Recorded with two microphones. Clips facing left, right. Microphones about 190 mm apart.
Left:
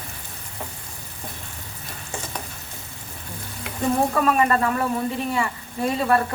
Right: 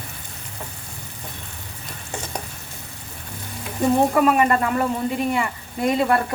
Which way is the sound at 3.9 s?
15° right (ahead or behind).